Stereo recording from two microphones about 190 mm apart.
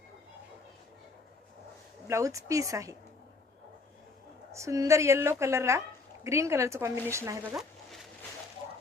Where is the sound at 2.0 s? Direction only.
15° right (ahead or behind).